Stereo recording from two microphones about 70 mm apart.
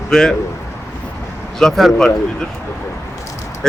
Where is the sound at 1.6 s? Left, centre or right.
Centre.